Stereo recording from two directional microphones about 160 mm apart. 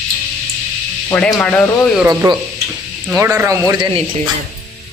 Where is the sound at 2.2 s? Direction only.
20° right (ahead or behind).